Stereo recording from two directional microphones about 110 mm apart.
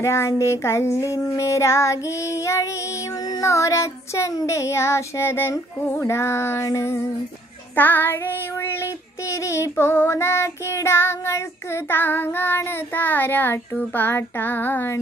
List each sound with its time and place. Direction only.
0.0 s child singing: 25° left (ahead or behind)